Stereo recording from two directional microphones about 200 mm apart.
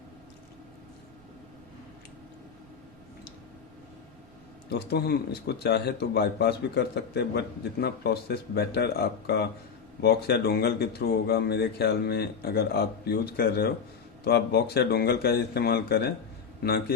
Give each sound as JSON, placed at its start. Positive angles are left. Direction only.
{"t": 4.7, "sound": "speech", "side_deg": 55}